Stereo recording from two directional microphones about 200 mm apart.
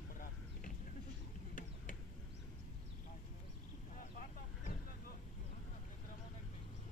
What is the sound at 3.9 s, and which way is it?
Vehicle, 40° left (ahead or behind).